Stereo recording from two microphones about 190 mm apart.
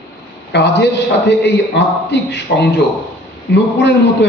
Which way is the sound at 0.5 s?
65° left (ahead or behind).